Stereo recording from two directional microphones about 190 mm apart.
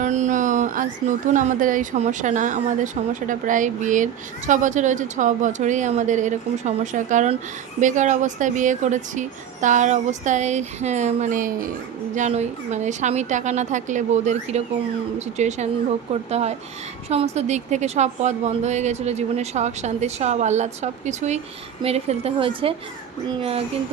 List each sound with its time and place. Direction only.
0.0 s speech: 40° right (ahead or behind)